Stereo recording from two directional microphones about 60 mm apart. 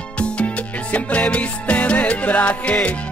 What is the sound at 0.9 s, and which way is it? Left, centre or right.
Music, left.